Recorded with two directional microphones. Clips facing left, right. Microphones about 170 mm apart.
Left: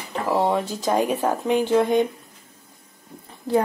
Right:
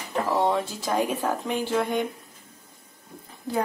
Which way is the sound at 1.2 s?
20° left (ahead or behind).